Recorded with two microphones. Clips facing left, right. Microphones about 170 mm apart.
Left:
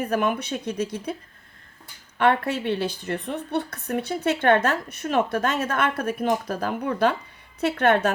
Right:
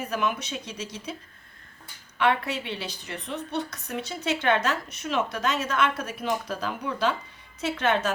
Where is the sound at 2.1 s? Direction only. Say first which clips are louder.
Left 4 dB; 50° left (ahead or behind).